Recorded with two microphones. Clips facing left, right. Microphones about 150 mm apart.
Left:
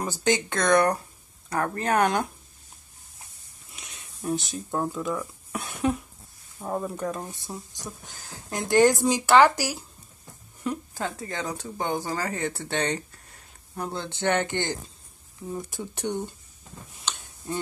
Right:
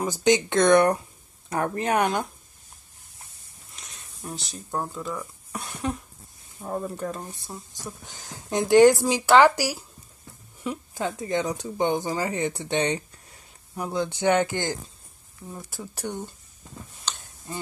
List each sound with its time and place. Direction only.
0.0 s speech: 20° right (ahead or behind)
3.7 s speech: centre (ahead or behind)
8.5 s speech: 15° right (ahead or behind)